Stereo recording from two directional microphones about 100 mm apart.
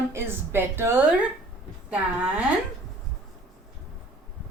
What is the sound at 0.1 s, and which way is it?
Speech, 25° right (ahead or behind).